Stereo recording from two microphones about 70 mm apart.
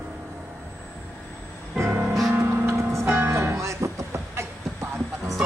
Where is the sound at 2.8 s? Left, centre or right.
Right.